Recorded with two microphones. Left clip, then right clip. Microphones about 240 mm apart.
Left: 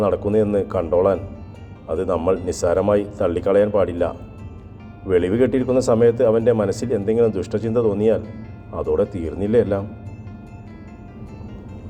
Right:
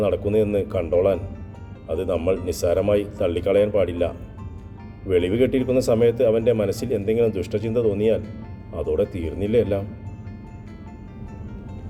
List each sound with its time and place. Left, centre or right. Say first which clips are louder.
0.3 s speech: left 2 dB; centre